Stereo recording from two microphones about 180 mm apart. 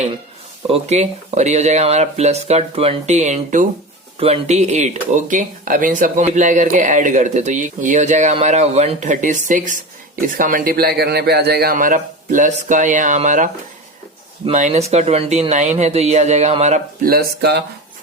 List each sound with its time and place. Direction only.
0.7 s speech: 40° right (ahead or behind); by 17.6 s 60° right (ahead or behind)